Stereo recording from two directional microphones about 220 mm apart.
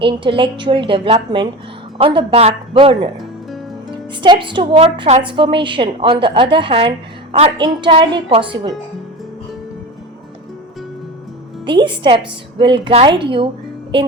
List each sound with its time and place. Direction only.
0.0 s a woman's voice: 25° right (ahead or behind)
11.6 s a woman's voice: 20° right (ahead or behind)